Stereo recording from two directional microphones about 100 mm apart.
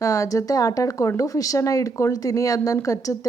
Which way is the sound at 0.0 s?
35° left (ahead or behind).